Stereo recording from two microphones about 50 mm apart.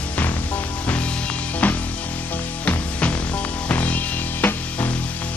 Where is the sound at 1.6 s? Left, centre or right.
Left.